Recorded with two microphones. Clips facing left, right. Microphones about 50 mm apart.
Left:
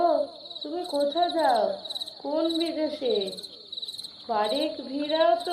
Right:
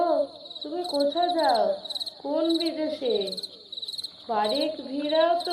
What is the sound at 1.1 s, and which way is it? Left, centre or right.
Speech, centre.